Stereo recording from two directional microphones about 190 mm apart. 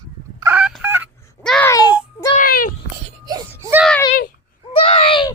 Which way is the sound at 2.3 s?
50° left (ahead or behind).